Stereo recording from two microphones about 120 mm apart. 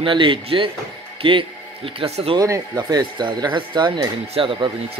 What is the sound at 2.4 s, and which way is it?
Speech, 30° right (ahead or behind).